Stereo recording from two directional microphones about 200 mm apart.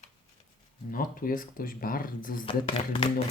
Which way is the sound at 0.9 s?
45° left (ahead or behind).